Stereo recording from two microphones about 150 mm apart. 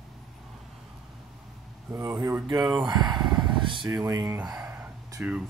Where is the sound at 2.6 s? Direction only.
Centre (ahead or behind).